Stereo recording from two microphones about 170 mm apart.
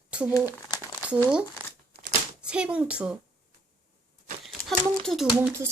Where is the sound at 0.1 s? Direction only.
5° right (ahead or behind).